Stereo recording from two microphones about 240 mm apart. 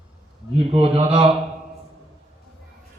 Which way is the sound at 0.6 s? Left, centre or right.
Right.